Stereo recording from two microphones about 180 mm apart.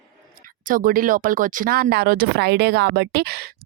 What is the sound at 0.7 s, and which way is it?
A woman's voice, 50° right (ahead or behind).